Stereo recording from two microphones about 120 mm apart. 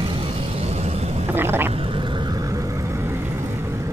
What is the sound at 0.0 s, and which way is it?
Vehicle, 45° right (ahead or behind).